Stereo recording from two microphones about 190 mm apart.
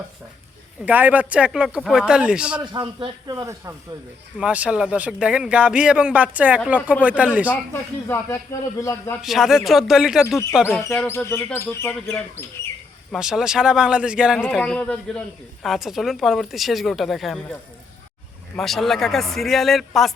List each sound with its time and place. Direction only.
0.9 s speech: 10° right (ahead or behind)
2.7 s speech: 25° right (ahead or behind)
4.4 s speech: 5° right (ahead or behind)
7.5 s speech: 10° left (ahead or behind)
9.2 s speech: centre (ahead or behind)
10.2 s speech: 15° left (ahead or behind)
13.1 s speech: 5° right (ahead or behind)
18.5 s speech: centre (ahead or behind)